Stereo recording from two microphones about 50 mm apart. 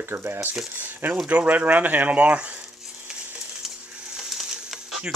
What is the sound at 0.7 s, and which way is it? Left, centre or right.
Speech, right.